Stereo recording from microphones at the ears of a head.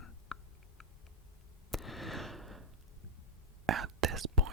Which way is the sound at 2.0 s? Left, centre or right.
Centre.